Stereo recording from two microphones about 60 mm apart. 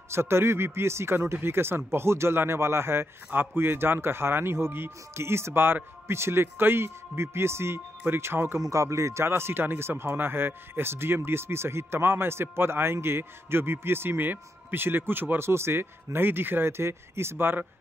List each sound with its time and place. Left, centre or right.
0.1 s a man's voice: right
8.5 s speech: right